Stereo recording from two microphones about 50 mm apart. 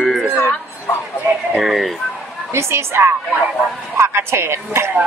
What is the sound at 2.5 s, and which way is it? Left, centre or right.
A woman's voice, right.